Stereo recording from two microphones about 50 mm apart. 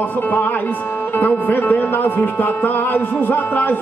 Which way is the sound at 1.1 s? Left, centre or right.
Left.